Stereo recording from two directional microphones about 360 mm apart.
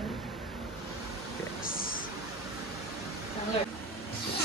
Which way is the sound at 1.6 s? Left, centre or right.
Left.